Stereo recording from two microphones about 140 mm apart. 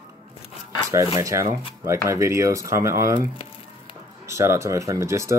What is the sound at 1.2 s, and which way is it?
Speech, 25° right (ahead or behind).